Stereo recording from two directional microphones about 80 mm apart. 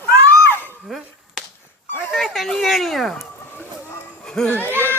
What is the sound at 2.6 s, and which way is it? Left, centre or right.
Speech, centre.